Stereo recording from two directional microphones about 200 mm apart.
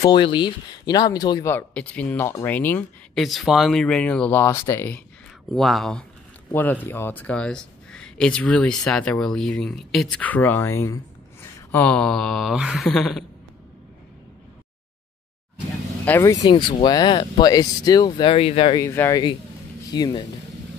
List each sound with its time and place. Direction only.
0.0 s speech: 20° left (ahead or behind)
3.2 s speech: centre (ahead or behind)
5.5 s speech: centre (ahead or behind)
16.1 s speech: 15° left (ahead or behind)
18.9 s speech: 15° left (ahead or behind)